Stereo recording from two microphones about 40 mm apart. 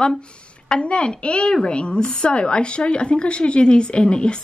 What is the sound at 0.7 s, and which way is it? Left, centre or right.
A woman's voice, left.